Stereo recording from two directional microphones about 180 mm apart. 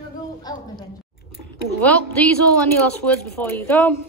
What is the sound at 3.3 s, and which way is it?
Speech, 10° left (ahead or behind).